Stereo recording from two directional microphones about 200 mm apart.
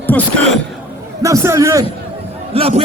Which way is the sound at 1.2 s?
15° right (ahead or behind).